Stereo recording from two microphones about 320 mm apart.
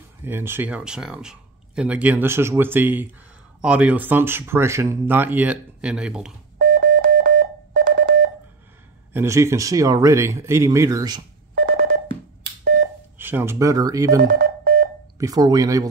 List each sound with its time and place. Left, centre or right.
0.2 s speech: centre
6.6 s telephone dialing: right
9.1 s speech: centre
11.5 s telephone: right
13.2 s speech: centre
14.2 s telephone dialing: right
15.1 s speech: centre